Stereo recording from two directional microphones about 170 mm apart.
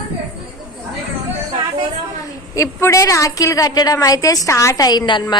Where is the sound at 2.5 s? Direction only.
15° left (ahead or behind).